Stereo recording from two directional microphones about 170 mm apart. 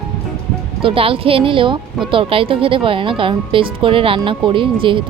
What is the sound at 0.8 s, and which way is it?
Speech, 30° right (ahead or behind).